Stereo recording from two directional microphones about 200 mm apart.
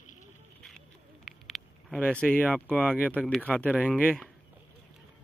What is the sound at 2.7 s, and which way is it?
Speech, 5° left (ahead or behind).